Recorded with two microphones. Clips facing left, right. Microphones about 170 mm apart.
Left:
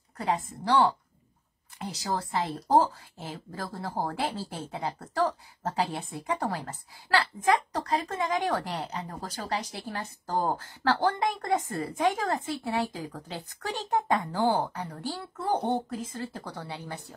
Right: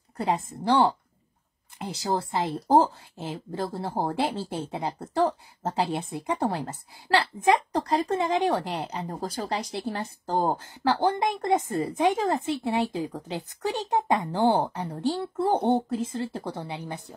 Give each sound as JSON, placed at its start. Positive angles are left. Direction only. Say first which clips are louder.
{"t": 0.5, "sound": "speech", "louder": "right 2 dB", "side_deg": -25}
{"t": 9.0, "sound": "speech", "louder": "right 6 dB", "side_deg": -30}
{"t": 14.4, "sound": "speech", "louder": "right 3 dB", "side_deg": -25}